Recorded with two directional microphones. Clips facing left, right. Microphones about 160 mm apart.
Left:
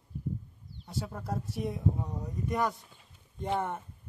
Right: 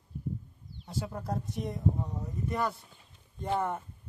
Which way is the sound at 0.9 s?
Centre (ahead or behind).